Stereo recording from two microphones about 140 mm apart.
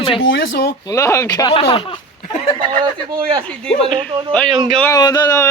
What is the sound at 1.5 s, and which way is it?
Speech, 45° left (ahead or behind).